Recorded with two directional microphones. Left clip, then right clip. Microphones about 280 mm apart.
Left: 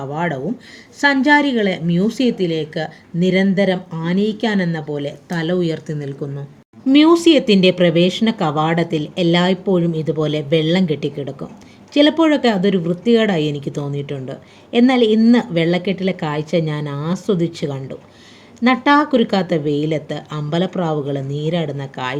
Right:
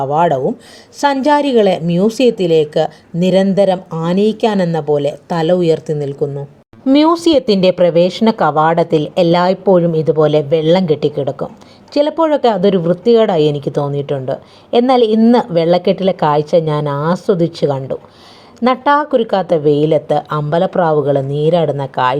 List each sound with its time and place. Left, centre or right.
0.1 s a woman's voice: centre